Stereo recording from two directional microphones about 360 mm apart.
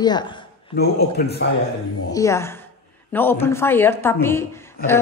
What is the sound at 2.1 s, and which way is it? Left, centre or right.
A woman's voice, centre.